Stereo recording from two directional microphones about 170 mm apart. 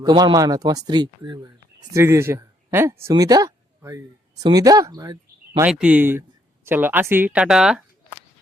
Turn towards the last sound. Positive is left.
turn(degrees=-5)  # may be behind; listen again after turning